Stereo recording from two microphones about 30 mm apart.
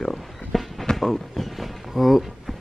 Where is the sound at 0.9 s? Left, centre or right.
Centre.